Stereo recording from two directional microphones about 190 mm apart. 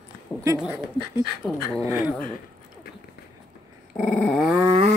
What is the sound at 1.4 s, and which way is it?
Dog, 5° left (ahead or behind).